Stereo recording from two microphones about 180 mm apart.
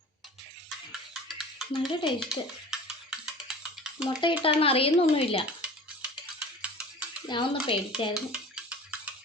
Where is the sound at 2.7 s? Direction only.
5° right (ahead or behind).